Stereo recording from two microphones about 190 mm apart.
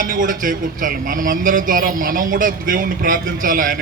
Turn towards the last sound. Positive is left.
turn(degrees=-45)  # may be behind; listen again after turning